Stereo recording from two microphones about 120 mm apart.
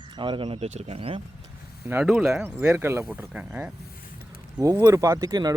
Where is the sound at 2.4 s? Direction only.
15° right (ahead or behind).